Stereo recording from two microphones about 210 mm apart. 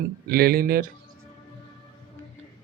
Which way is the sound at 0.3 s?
45° right (ahead or behind).